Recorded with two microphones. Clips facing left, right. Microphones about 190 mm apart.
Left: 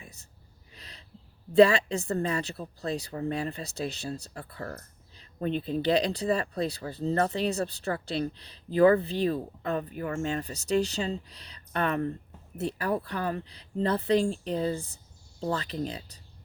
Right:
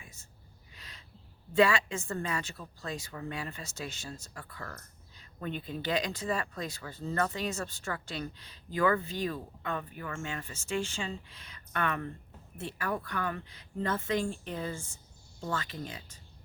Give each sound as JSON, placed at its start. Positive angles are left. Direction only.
{"t": 0.0, "sound": "gasp", "side_deg": 35}
{"t": 0.7, "sound": "owl", "side_deg": 35}
{"t": 1.5, "sound": "a woman's voice", "side_deg": 35}